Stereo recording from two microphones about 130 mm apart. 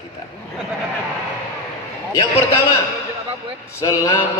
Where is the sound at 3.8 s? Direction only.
25° left (ahead or behind).